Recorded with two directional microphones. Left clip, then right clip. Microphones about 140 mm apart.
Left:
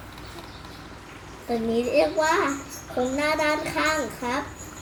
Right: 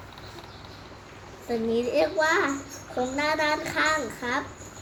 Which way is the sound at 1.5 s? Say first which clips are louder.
Left 1 dB; 15° right (ahead or behind).